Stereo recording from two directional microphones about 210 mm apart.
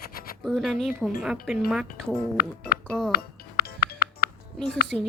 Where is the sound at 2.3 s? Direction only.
45° left (ahead or behind).